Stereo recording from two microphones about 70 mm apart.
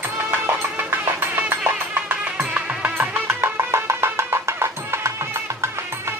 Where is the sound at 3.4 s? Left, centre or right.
Right.